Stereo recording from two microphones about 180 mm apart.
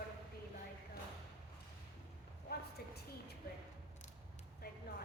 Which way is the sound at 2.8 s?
60° left (ahead or behind).